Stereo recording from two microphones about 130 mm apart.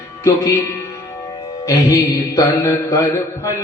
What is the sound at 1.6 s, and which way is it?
Mantra, 25° left (ahead or behind).